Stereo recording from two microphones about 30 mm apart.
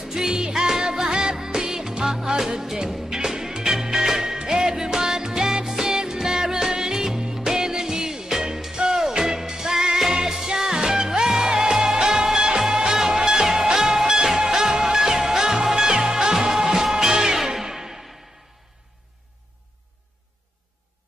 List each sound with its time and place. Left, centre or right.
0.0 s music: centre